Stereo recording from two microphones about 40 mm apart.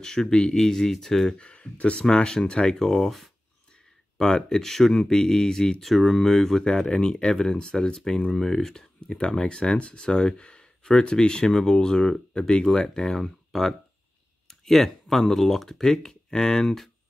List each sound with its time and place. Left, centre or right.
0.0 s speech: centre
1.4 s speech: left
2.0 s speech: centre
2.8 s speech: centre
4.2 s speech: centre